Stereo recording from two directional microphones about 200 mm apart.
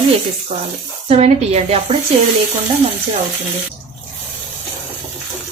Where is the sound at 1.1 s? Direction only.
30° right (ahead or behind).